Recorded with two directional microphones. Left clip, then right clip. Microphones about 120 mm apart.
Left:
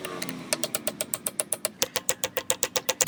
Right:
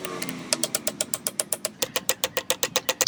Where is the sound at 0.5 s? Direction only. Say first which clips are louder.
Right 3 dB; 5° left (ahead or behind).